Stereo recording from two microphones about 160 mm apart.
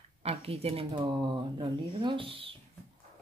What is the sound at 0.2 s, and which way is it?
Speech, 40° right (ahead or behind).